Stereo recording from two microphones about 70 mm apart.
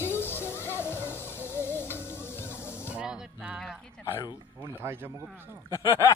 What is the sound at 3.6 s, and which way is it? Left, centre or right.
Dog, centre.